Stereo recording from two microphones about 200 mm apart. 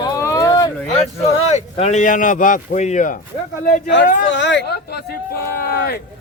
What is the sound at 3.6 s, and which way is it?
Speech, 50° left (ahead or behind).